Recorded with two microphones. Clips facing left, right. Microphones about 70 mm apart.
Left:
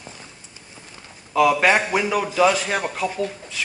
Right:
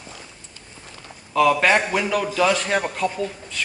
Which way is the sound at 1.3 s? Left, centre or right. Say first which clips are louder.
Even; centre.